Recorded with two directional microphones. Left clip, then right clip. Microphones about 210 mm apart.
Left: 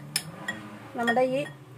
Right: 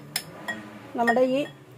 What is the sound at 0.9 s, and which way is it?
Speech, 30° right (ahead or behind).